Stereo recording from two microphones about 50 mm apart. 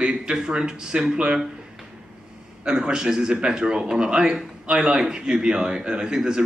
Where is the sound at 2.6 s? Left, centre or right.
Centre.